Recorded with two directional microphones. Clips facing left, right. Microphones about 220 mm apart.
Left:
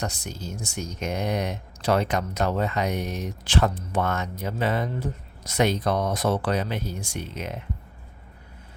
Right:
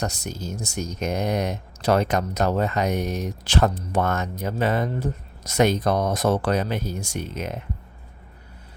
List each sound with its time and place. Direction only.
0.0 s speech: 40° right (ahead or behind)